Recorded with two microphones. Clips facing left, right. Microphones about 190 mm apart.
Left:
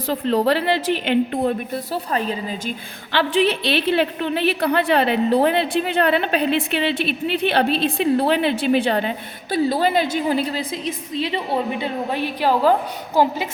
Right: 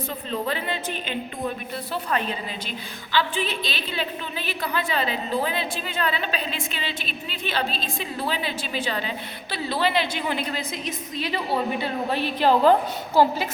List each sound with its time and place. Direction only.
0.1 s a woman's voice: 80° left
1.9 s a woman's voice: 35° left (ahead or behind)
3.1 s a woman's voice: 65° left (ahead or behind); by 13.3 s 15° left (ahead or behind)